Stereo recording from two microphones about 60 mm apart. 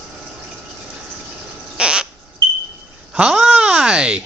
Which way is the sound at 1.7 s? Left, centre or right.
Centre.